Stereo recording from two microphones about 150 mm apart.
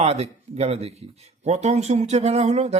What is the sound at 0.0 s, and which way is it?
Speech, 45° right (ahead or behind).